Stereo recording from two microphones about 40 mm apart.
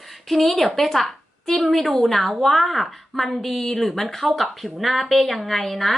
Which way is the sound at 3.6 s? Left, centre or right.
Centre.